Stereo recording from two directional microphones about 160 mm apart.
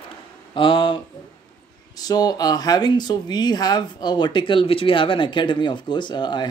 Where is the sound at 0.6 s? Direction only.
30° left (ahead or behind).